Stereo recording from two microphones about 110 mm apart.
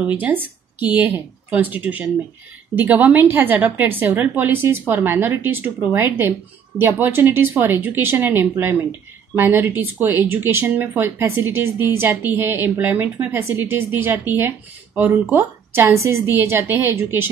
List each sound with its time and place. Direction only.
0.0 s a woman's voice: 15° right (ahead or behind)